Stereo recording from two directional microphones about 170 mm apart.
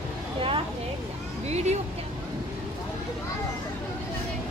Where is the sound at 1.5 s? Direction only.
40° right (ahead or behind).